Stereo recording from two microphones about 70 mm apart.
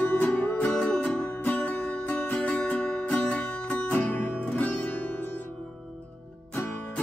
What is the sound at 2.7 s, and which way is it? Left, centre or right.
Music, centre.